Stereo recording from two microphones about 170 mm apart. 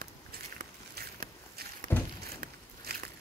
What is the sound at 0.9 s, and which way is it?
Walk, 65° right (ahead or behind).